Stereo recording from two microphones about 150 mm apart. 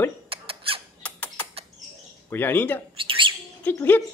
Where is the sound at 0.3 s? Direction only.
40° right (ahead or behind).